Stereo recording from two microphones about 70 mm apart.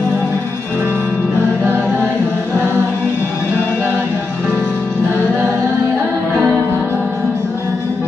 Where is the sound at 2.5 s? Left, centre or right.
Left.